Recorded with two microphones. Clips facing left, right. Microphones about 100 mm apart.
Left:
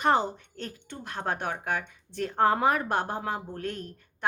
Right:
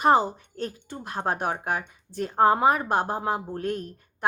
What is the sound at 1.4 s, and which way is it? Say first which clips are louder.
Speech: right 3 dB; 35° right (ahead or behind).